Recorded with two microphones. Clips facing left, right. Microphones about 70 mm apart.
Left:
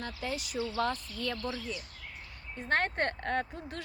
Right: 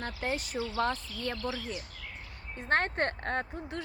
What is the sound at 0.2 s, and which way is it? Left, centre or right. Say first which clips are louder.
Speech: right 1 dB; right.